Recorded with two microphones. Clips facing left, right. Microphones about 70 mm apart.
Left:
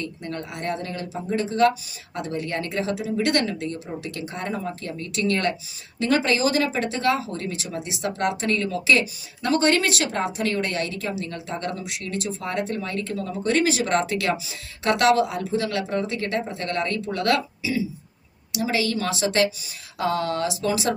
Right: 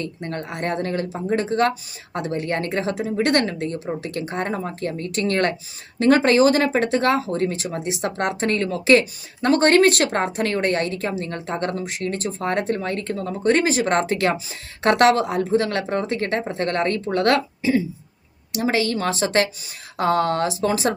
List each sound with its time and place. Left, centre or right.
0.0 s speech: right